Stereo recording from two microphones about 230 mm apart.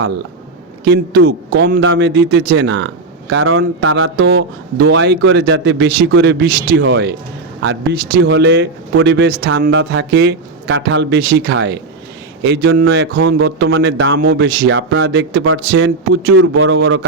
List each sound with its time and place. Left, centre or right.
0.9 s speech: right